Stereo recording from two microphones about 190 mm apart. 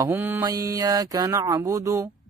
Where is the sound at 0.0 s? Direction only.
10° right (ahead or behind).